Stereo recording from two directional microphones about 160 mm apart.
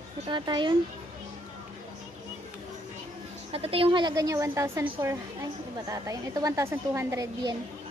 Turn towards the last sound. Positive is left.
turn(degrees=-20)  # may be behind; listen again after turning